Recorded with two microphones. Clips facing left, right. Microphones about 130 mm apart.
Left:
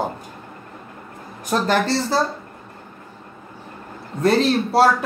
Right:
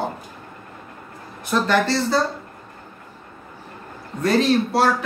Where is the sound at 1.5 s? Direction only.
40° left (ahead or behind).